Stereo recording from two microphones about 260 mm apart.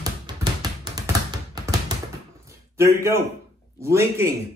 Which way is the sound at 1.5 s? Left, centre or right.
Centre.